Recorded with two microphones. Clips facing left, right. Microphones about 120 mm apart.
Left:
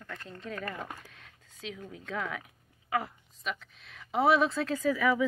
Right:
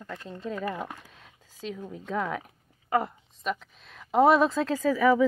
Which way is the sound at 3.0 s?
55° right (ahead or behind).